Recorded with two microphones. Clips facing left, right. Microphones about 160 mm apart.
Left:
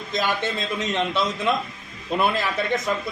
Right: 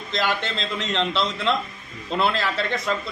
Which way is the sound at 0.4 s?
15° left (ahead or behind).